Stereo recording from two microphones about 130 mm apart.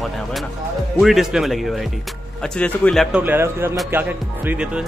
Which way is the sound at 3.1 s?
15° right (ahead or behind).